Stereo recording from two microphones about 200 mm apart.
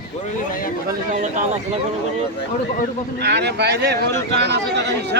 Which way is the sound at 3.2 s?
55° right (ahead or behind).